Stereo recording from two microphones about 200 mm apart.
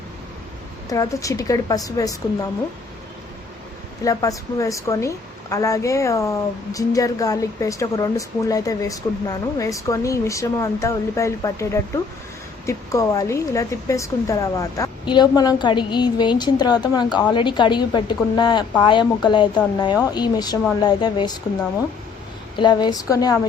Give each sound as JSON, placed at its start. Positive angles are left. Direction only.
{"t": 0.9, "sound": "speech", "side_deg": 15}
{"t": 4.0, "sound": "speech", "side_deg": 15}
{"t": 22.5, "sound": "speech", "side_deg": 20}